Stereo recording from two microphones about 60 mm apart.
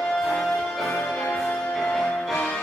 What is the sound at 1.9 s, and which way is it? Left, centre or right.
Music, centre.